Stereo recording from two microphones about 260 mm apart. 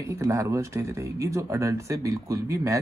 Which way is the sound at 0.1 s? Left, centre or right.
Centre.